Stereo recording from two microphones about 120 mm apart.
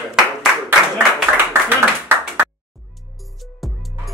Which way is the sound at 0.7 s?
15° right (ahead or behind).